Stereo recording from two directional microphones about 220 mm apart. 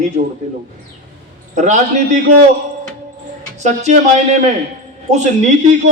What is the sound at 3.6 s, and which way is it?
Speech, 30° right (ahead or behind).